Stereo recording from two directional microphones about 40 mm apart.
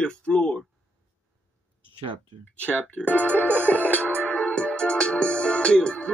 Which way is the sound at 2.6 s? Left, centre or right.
Left.